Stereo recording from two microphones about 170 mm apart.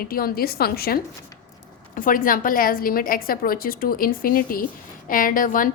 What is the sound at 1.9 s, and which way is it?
A woman's voice, 55° left (ahead or behind).